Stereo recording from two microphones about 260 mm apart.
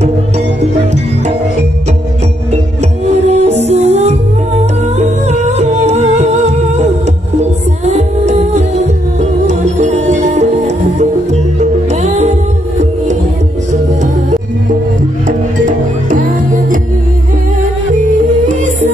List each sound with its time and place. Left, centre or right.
3.3 s music: right
11.6 s music: right
15.2 s music: right